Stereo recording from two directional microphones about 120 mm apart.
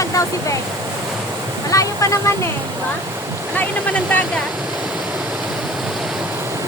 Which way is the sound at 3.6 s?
15° left (ahead or behind).